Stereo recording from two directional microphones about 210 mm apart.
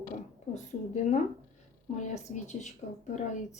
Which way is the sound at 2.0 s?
35° left (ahead or behind).